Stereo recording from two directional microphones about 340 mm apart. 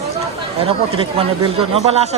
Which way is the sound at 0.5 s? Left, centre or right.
Centre.